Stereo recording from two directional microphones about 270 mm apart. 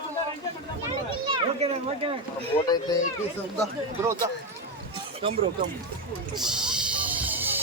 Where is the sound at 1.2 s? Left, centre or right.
Centre.